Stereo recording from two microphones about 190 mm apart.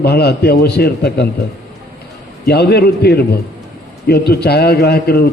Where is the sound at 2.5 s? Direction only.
60° left (ahead or behind).